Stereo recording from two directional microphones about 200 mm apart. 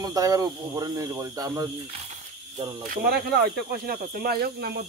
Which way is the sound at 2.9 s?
50° right (ahead or behind).